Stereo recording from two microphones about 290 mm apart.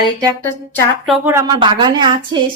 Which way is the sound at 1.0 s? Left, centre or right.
Centre.